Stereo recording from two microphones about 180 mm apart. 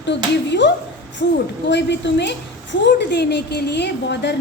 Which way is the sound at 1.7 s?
75° left (ahead or behind).